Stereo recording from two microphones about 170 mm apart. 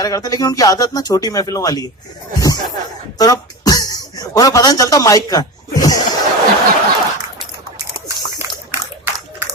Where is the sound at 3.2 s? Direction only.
20° left (ahead or behind).